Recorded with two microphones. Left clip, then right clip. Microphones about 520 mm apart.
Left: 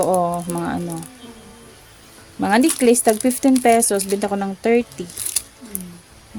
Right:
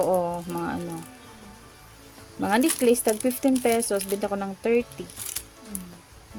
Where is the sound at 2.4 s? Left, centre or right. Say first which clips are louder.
Left 6 dB; right.